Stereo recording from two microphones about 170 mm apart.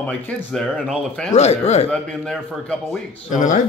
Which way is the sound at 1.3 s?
40° left (ahead or behind).